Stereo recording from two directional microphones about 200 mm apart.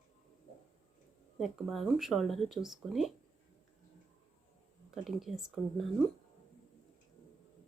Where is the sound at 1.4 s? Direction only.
Centre (ahead or behind).